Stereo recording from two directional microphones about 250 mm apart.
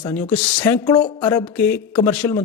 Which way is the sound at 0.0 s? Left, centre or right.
Centre.